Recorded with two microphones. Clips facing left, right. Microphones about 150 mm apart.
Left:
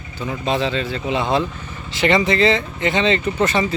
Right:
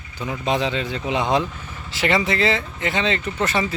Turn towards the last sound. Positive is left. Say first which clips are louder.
# left 4 dB
turn(degrees=0)  # may be behind; listen again after turning